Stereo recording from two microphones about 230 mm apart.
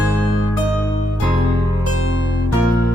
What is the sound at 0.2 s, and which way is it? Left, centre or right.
Music, left.